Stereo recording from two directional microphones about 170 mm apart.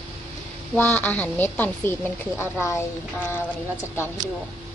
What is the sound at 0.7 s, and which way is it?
A woman's voice, 10° left (ahead or behind).